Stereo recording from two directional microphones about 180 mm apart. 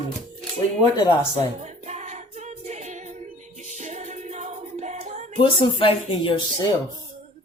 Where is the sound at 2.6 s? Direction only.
40° right (ahead or behind).